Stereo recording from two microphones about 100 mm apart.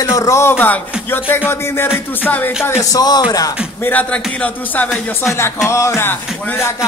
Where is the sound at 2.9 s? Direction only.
40° left (ahead or behind).